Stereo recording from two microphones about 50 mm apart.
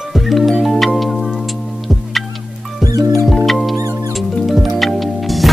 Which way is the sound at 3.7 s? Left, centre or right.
Right.